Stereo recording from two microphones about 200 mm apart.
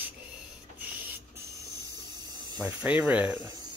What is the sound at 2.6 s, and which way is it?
Speech, 5° right (ahead or behind).